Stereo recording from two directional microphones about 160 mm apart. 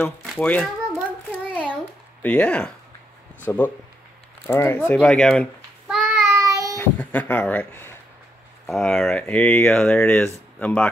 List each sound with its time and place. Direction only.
0.2 s a child's voice: 5° left (ahead or behind)
1.5 s a sound: 10° left (ahead or behind)
2.2 s a child's voice: 10° left (ahead or behind)
6.0 s child singing: 15° right (ahead or behind)
6.8 s speech: 10° left (ahead or behind)
8.6 s speech: 5° left (ahead or behind)